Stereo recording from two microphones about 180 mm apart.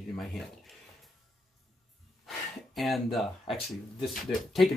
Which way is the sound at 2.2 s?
Centre (ahead or behind).